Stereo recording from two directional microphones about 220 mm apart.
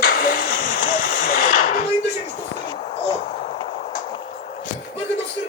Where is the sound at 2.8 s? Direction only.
30° left (ahead or behind).